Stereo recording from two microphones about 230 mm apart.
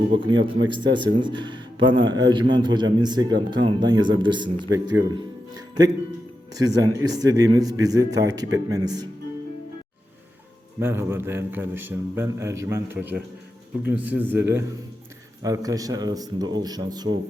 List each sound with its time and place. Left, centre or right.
0.1 s speech: right
5.1 s music: centre
6.5 s a man's voice: centre
10.8 s a man's voice: centre